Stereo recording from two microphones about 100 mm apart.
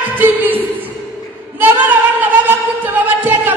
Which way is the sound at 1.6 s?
20° right (ahead or behind).